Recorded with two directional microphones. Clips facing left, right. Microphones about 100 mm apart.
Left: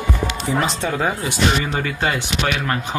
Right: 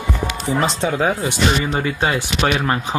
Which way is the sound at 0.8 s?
10° right (ahead or behind).